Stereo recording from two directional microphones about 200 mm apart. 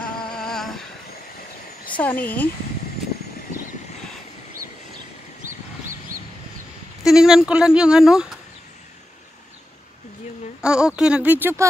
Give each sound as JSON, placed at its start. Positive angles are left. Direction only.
{"t": 0.0, "sound": "a sound", "side_deg": 5}
{"t": 2.0, "sound": "speech", "side_deg": 10}
{"t": 7.0, "sound": "speech", "side_deg": 0}
{"t": 10.6, "sound": "speech", "side_deg": -5}